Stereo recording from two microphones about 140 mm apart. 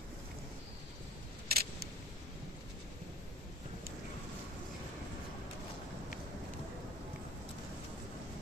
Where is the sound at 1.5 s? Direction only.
90° right.